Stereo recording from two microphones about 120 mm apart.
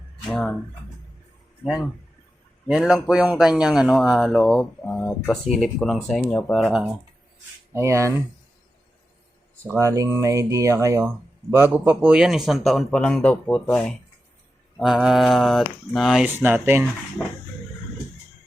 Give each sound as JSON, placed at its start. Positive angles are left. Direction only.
{"t": 0.3, "sound": "speech", "side_deg": 0}
{"t": 2.6, "sound": "speech", "side_deg": -5}
{"t": 7.7, "sound": "speech", "side_deg": -25}
{"t": 9.6, "sound": "speech", "side_deg": -25}
{"t": 11.9, "sound": "speech", "side_deg": -5}
{"t": 14.8, "sound": "speech", "side_deg": 0}
{"t": 16.2, "sound": "speech", "side_deg": -15}